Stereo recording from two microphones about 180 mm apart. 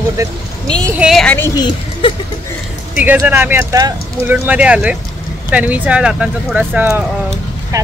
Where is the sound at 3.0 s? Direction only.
10° right (ahead or behind).